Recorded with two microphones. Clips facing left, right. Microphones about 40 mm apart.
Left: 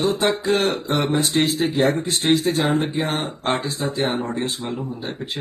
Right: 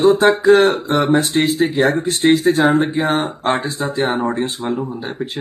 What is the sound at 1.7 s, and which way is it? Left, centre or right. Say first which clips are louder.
Speech: right 1 dB; right.